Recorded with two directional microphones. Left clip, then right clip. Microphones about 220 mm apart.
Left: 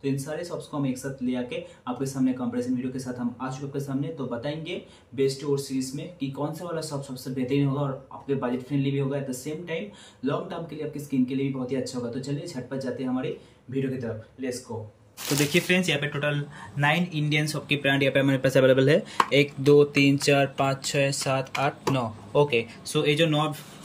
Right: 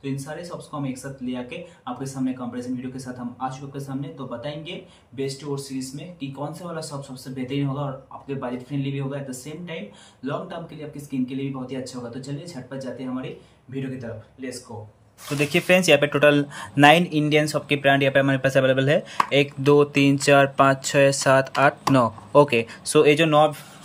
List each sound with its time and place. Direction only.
0.0 s speech: centre (ahead or behind)
15.5 s speech: 20° right (ahead or behind)